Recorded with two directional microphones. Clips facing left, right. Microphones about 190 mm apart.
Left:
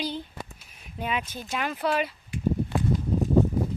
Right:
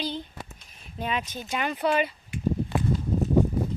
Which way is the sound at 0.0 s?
10° left (ahead or behind).